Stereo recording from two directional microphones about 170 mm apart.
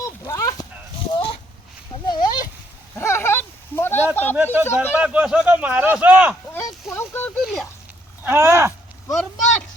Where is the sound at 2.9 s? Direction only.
15° left (ahead or behind).